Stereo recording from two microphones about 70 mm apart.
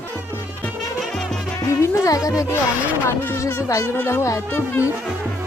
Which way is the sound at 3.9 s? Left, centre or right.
Left.